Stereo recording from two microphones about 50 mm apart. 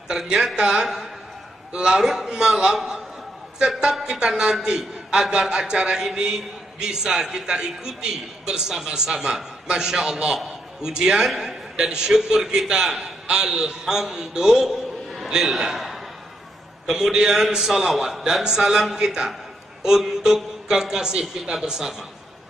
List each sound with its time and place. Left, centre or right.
0.1 s a man's voice: centre